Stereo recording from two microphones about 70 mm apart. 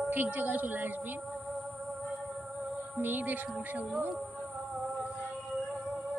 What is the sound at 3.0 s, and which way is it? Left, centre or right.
Speech, right.